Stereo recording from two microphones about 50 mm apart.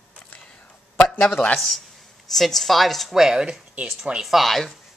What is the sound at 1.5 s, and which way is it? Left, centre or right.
A woman's voice, centre.